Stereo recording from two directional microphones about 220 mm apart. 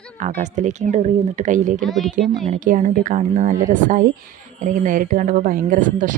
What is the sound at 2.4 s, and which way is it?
Speech, 35° right (ahead or behind).